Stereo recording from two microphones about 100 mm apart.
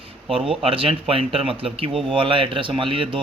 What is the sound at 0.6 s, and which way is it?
A man's voice, 65° right (ahead or behind).